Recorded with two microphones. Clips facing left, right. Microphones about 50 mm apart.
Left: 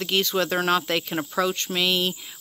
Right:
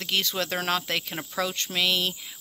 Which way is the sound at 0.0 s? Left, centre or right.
Centre.